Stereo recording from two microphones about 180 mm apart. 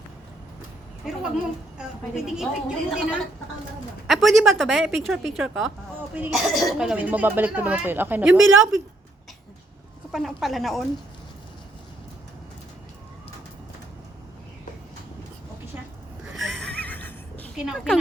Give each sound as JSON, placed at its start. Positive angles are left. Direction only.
{"t": 1.0, "sound": "a sound", "side_deg": -5}
{"t": 2.2, "sound": "speech", "side_deg": -5}
{"t": 8.3, "sound": "a woman's voice", "side_deg": -90}
{"t": 10.1, "sound": "speech", "side_deg": 0}
{"t": 16.2, "sound": "a sound", "side_deg": 0}
{"t": 17.6, "sound": "speech", "side_deg": 0}